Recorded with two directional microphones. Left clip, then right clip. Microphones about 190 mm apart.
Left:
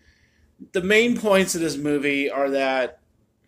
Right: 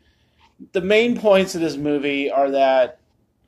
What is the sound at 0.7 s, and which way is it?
Speech, 25° left (ahead or behind).